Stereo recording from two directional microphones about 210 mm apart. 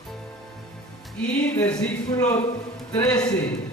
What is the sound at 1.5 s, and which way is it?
Speech, 5° left (ahead or behind).